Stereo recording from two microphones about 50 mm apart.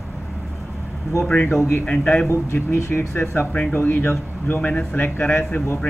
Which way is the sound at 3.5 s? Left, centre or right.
Left.